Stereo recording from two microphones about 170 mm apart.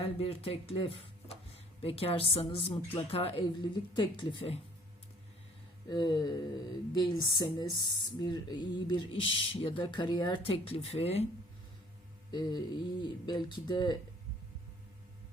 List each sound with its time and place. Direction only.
0.0 s speech: 35° left (ahead or behind)
5.9 s speech: 25° left (ahead or behind)
12.3 s speech: 25° left (ahead or behind)